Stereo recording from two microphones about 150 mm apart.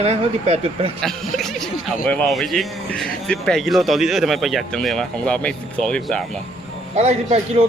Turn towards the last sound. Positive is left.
turn(degrees=-45)  # may be behind; listen again after turning